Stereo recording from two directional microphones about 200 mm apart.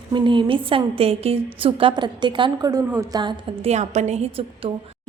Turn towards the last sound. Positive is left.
turn(degrees=-30)  # may be behind; listen again after turning